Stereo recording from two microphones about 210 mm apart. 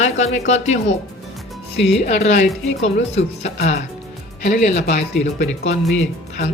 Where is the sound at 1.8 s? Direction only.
Centre (ahead or behind).